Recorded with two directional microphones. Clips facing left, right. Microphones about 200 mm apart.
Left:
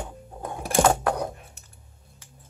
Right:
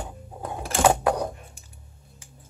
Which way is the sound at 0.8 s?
5° right (ahead or behind).